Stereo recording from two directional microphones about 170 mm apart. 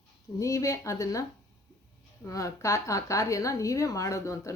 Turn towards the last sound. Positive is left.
turn(degrees=20)  # may be behind; listen again after turning